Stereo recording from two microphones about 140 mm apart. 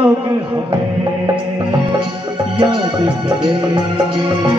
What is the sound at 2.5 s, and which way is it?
Music, 35° right (ahead or behind).